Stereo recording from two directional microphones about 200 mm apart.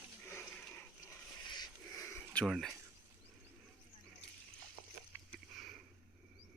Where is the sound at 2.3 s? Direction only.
Centre (ahead or behind).